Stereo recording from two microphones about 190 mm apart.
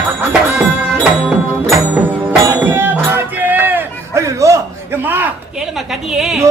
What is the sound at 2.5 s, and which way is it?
Music, 10° right (ahead or behind).